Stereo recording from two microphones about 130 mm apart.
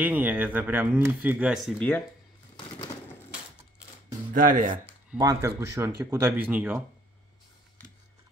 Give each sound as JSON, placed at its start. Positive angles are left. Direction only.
{"t": 0.0, "sound": "speech", "side_deg": -10}
{"t": 1.8, "sound": "speech", "side_deg": 15}
{"t": 4.3, "sound": "speech", "side_deg": -90}
{"t": 5.2, "sound": "speech", "side_deg": -25}